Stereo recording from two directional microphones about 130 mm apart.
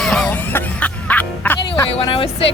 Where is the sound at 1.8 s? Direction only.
45° left (ahead or behind).